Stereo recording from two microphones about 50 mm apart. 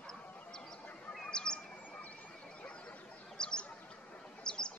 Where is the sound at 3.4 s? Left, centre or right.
Centre.